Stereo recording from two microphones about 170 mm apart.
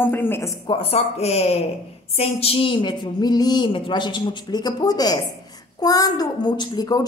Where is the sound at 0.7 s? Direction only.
35° left (ahead or behind).